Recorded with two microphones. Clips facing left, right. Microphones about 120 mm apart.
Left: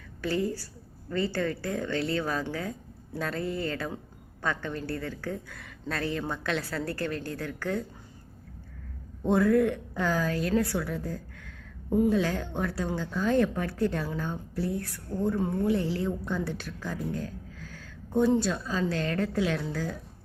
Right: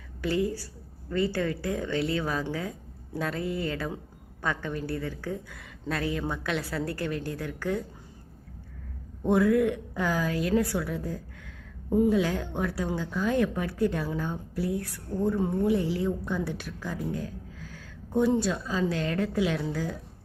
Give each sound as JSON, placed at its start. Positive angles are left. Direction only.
{"t": 0.2, "sound": "speech", "side_deg": -15}
{"t": 9.3, "sound": "a woman's voice", "side_deg": -10}